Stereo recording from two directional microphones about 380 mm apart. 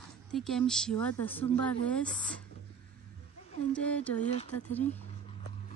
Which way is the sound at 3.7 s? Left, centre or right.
Centre.